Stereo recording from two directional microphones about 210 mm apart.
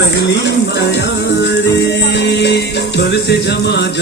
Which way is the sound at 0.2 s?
55° left (ahead or behind).